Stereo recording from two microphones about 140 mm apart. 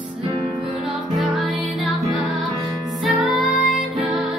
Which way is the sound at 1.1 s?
Centre (ahead or behind).